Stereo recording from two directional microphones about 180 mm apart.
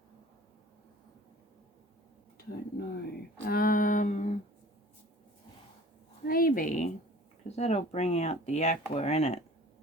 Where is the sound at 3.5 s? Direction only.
55° left (ahead or behind).